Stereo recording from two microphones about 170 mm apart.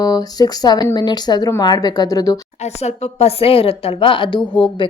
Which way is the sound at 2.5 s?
40° left (ahead or behind).